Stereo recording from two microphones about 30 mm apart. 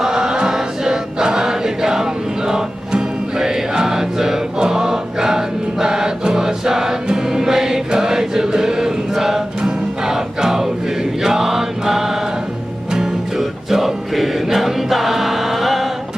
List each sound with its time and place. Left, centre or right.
0.0 s choir: centre
9.6 s music: right
10.1 s chant: centre
12.9 s music: right
13.4 s choir: centre